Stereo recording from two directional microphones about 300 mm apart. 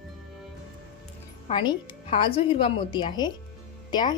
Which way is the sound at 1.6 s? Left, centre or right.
Centre.